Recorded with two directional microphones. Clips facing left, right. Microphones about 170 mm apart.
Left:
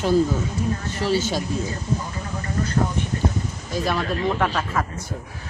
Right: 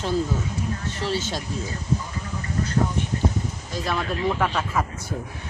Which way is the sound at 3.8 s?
Centre (ahead or behind).